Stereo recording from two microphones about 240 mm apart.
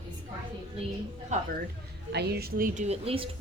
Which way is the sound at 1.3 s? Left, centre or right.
Right.